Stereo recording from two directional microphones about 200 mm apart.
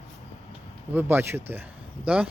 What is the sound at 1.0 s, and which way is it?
Speech, 10° right (ahead or behind).